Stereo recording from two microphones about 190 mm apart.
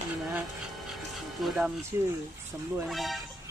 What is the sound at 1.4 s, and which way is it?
Speech, 5° right (ahead or behind).